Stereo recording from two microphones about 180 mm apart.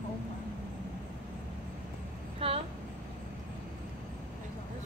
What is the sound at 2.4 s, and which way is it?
Vehicle, 30° right (ahead or behind).